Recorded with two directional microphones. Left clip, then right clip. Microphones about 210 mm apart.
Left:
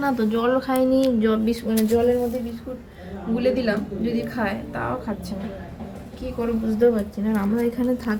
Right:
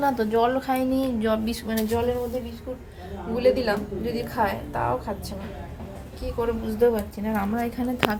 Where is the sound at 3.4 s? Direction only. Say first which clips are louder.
Right 1 dB; 25° right (ahead or behind).